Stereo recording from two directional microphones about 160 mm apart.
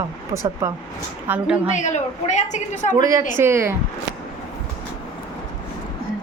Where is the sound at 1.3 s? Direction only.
5° right (ahead or behind).